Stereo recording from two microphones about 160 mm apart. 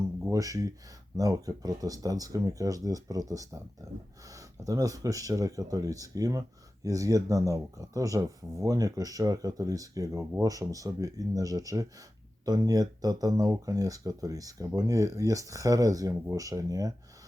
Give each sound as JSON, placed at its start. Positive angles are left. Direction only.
{"t": 0.3, "sound": "speech", "side_deg": -20}